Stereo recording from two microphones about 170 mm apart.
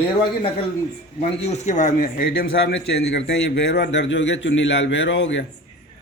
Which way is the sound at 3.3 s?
90° left.